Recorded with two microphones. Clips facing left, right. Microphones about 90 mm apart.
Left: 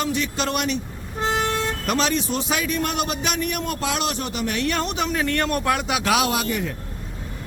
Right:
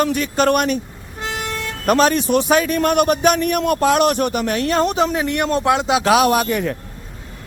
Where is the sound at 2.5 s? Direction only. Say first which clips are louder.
Right 8 dB; 50° right (ahead or behind).